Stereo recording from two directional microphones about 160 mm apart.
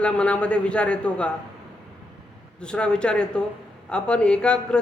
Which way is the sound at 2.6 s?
5° left (ahead or behind).